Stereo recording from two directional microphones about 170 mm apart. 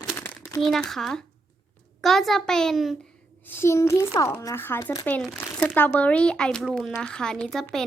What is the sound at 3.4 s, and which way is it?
Speech, 15° left (ahead or behind).